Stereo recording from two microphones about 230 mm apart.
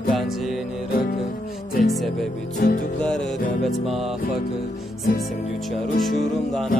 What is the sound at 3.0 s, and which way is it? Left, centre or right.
Music, centre.